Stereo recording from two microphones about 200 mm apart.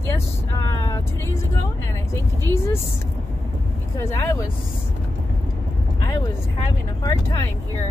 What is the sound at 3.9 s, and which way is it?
Speech, 15° left (ahead or behind).